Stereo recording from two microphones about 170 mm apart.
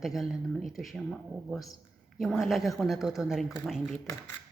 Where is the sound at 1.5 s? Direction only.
20° left (ahead or behind).